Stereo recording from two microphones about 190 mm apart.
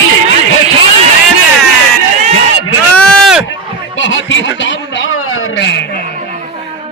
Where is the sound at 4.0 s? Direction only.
80° left.